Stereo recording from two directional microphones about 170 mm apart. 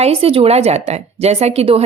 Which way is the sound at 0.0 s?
35° right (ahead or behind).